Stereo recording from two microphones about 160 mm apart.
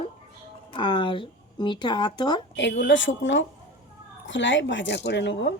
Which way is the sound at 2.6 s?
90° left.